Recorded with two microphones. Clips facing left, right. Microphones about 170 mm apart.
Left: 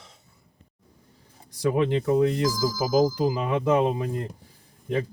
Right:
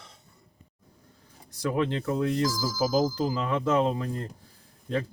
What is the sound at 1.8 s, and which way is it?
Speech, 15° left (ahead or behind).